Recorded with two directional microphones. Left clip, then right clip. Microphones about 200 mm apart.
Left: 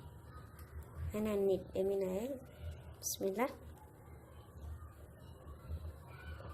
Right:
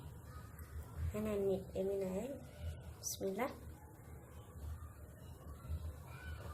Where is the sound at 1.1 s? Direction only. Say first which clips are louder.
Left 3 dB; 45° left (ahead or behind).